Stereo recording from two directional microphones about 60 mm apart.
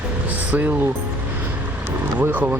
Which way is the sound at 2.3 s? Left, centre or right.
Right.